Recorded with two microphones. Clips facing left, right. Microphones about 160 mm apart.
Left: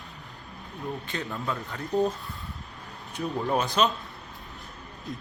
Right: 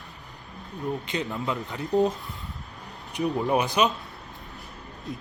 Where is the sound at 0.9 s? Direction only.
20° right (ahead or behind).